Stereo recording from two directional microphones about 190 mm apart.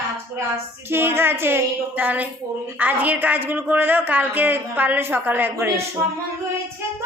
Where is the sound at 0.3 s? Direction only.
15° right (ahead or behind).